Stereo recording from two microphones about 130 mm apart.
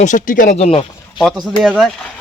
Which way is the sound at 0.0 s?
80° left.